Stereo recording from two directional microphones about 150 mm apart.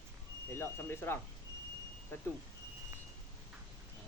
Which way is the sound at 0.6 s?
15° left (ahead or behind).